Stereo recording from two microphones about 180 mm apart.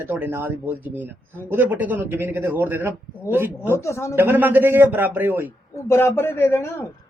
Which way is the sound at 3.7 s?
15° left (ahead or behind).